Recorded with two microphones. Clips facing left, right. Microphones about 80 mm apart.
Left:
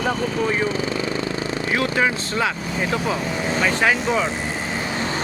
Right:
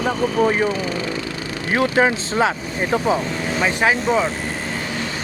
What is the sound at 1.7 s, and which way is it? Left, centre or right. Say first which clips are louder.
Speech: right 5 dB; right.